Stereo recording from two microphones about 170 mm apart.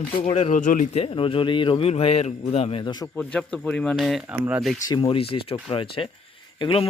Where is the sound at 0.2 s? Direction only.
35° left (ahead or behind).